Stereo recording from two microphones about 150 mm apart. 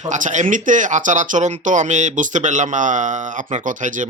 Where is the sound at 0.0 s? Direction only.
55° right (ahead or behind).